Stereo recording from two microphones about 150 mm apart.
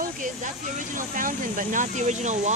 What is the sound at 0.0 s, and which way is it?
Vehicle, 60° right (ahead or behind).